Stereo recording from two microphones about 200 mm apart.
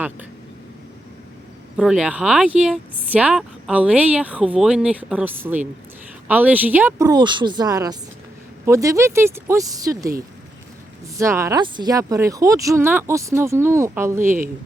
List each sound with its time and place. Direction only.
1.7 s speech: 5° right (ahead or behind)
11.2 s speech: 15° right (ahead or behind)